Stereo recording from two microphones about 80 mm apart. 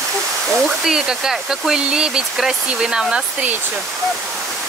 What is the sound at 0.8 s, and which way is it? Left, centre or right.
Speech, centre.